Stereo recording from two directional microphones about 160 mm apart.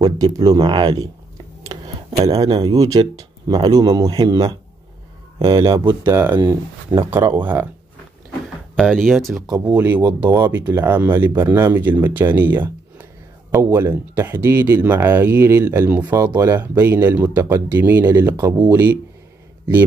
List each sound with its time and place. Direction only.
0.0 s speech: 25° right (ahead or behind)
2.6 s a man's voice: 20° right (ahead or behind)
5.7 s speech: 20° right (ahead or behind)
7.0 s speech: 15° right (ahead or behind)
8.7 s speech: 5° left (ahead or behind)
9.8 s speech: 10° right (ahead or behind)